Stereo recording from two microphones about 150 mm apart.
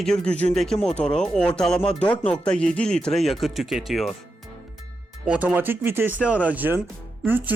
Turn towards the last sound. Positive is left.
turn(degrees=-15)  # may be behind; listen again after turning